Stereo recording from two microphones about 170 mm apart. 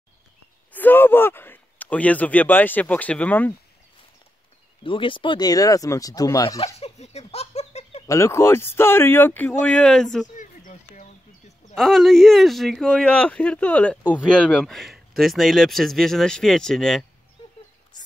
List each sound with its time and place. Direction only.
0.7 s speech: 10° left (ahead or behind)
4.8 s speech: 30° left (ahead or behind)
6.6 s giggle: 40° left (ahead or behind)
8.1 s speech: 15° left (ahead or behind)
10.3 s a sound: 50° left (ahead or behind)
11.7 s speech: centre (ahead or behind)